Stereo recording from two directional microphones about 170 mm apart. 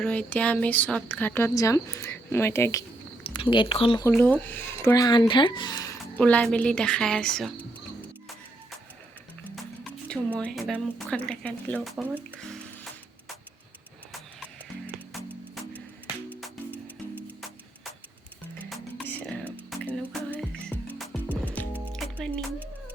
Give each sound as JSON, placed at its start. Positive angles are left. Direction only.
{"t": 0.0, "sound": "speech", "side_deg": 5}
{"t": 3.2, "sound": "speech", "side_deg": 30}
{"t": 4.1, "sound": "speech", "side_deg": 10}
{"t": 6.1, "sound": "speech", "side_deg": 10}
{"t": 10.3, "sound": "speech", "side_deg": 5}
{"t": 12.5, "sound": "music", "side_deg": 0}
{"t": 16.7, "sound": "music", "side_deg": -10}
{"t": 18.6, "sound": "music", "side_deg": 5}